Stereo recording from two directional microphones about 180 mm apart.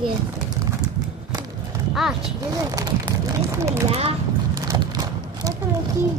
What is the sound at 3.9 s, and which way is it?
Speech, 35° right (ahead or behind).